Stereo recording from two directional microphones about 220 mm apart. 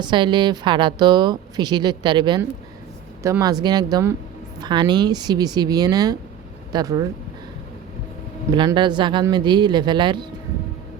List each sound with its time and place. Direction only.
0.0 s speech: 20° right (ahead or behind)
8.5 s speech: 20° right (ahead or behind)